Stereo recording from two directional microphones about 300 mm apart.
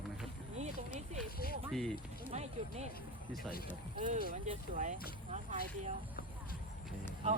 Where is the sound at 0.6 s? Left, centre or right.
Right.